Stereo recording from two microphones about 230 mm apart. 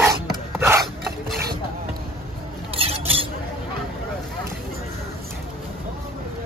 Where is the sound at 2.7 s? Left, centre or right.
Right.